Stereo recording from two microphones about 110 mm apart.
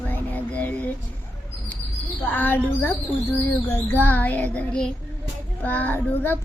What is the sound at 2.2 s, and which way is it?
Child singing, 15° left (ahead or behind).